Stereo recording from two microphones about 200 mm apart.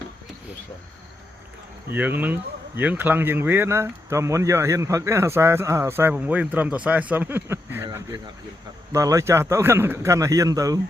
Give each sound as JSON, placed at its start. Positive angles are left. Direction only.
{"t": 1.9, "sound": "speech", "side_deg": -10}
{"t": 7.9, "sound": "a sound", "side_deg": -20}
{"t": 8.9, "sound": "speech", "side_deg": -15}